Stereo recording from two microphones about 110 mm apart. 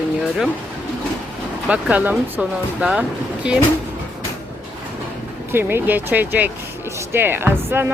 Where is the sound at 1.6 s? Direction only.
10° right (ahead or behind).